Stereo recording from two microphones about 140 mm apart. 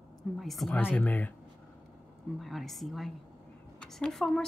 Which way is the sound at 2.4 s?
Centre (ahead or behind).